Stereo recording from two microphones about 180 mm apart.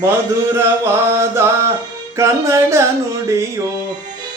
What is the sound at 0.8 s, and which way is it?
Music, 15° right (ahead or behind).